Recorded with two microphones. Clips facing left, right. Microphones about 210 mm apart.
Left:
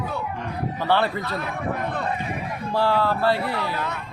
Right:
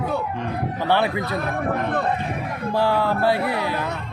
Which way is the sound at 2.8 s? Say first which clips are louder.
Right 1 dB; 15° right (ahead or behind).